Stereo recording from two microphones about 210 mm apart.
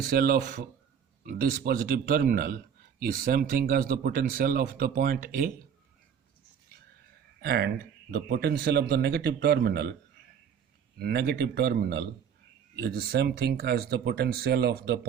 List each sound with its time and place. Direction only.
0.0 s speech: 45° right (ahead or behind)
7.4 s speech: 50° right (ahead or behind)
10.9 s speech: 50° right (ahead or behind)